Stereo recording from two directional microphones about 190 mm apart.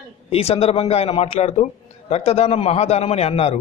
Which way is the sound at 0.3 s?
30° left (ahead or behind).